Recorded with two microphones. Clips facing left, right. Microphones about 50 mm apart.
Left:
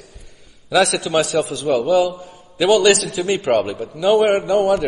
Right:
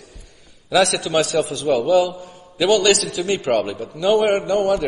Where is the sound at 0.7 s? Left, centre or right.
Centre.